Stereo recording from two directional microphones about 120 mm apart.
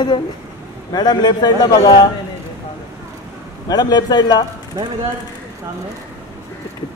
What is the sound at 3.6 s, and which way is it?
Speech, 35° left (ahead or behind).